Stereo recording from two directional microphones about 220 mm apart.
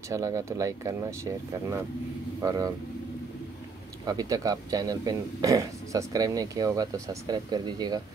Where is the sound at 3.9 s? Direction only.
15° right (ahead or behind).